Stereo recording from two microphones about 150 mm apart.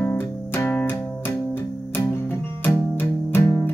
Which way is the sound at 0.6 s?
15° left (ahead or behind).